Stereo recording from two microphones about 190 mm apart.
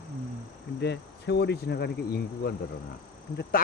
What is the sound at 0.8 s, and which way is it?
Speech, 65° left (ahead or behind).